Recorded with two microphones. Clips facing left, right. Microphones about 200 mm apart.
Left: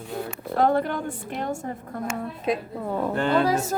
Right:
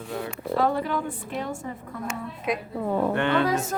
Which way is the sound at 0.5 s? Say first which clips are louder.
Left 3 dB; 55° left (ahead or behind).